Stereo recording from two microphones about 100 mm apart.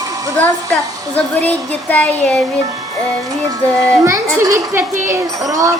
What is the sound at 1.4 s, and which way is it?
Child singing, 15° left (ahead or behind).